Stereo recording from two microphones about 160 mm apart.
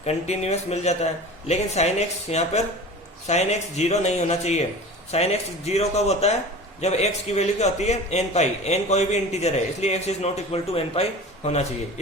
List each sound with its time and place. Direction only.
0.0 s a man's voice: 40° left (ahead or behind)